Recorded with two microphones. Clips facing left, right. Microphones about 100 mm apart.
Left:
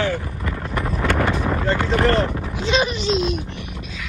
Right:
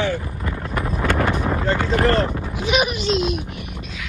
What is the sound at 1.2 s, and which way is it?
Vehicle, 10° right (ahead or behind).